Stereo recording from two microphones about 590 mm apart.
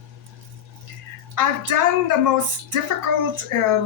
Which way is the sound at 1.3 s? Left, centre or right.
Right.